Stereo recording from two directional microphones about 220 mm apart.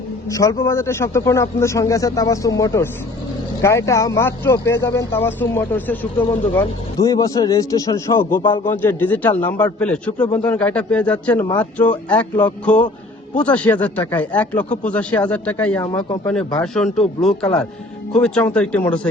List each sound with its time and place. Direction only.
0.3 s speech: 15° left (ahead or behind)
8.4 s a man's voice: 20° left (ahead or behind)
8.6 s speech: 10° left (ahead or behind)